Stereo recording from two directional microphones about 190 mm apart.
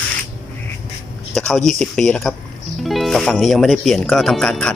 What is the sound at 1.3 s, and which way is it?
Speech, centre (ahead or behind).